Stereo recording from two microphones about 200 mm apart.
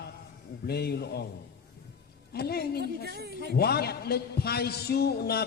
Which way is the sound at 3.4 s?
50° left (ahead or behind).